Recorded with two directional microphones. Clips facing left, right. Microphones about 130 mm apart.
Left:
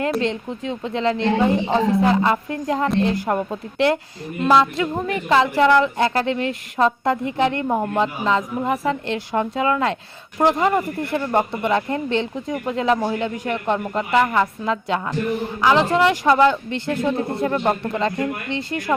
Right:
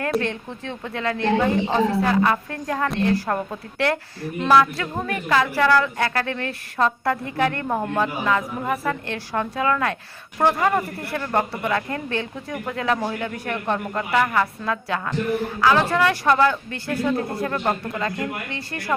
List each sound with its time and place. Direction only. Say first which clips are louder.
0.2 s speech: left 4 dB; 20° left (ahead or behind)